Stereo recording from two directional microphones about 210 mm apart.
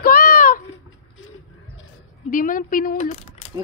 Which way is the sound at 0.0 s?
45° left (ahead or behind).